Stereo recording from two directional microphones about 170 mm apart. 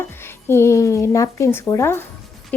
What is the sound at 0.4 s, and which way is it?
A woman's voice, 15° left (ahead or behind).